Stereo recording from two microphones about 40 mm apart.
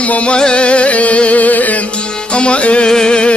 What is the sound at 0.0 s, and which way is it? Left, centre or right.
Music, left.